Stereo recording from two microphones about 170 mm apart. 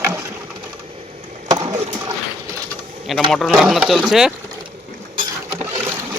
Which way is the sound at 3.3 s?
Centre (ahead or behind).